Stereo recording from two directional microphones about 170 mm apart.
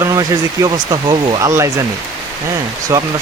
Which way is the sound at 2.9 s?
15° right (ahead or behind).